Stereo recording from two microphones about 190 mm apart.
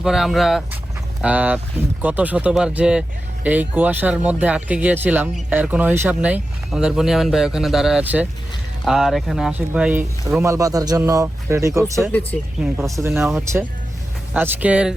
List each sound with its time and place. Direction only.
0.0 s speech: centre (ahead or behind)